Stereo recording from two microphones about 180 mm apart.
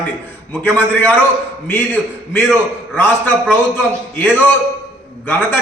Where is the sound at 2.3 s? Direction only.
10° left (ahead or behind).